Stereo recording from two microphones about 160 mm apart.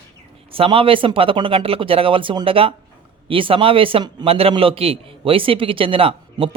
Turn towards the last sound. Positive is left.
turn(degrees=-35)  # may be behind; listen again after turning